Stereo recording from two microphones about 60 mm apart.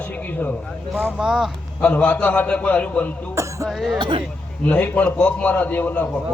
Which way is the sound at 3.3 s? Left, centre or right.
Right.